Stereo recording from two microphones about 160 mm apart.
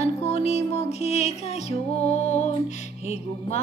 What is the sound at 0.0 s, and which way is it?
Music, 40° left (ahead or behind).